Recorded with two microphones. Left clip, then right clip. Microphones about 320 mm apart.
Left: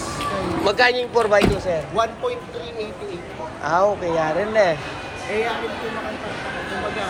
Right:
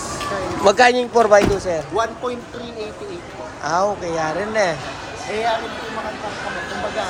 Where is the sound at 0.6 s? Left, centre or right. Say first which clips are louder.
Right 5 dB; right.